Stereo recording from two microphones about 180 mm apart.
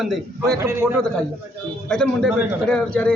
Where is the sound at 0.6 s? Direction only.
15° right (ahead or behind).